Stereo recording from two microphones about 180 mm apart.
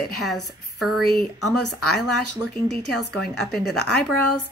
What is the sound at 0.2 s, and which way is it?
Speech, centre (ahead or behind).